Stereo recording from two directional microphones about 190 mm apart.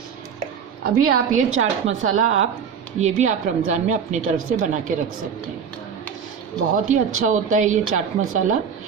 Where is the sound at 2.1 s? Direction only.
40° right (ahead or behind).